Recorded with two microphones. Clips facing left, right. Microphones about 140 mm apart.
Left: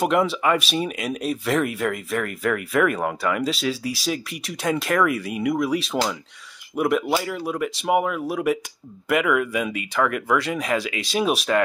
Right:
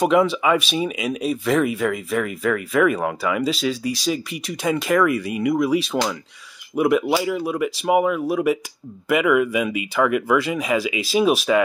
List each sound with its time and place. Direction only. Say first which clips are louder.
0.0 s speech: right 3 dB; centre (ahead or behind)